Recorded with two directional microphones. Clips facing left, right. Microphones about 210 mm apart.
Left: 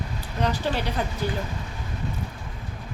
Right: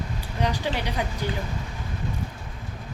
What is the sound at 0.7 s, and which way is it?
Speech, 15° right (ahead or behind).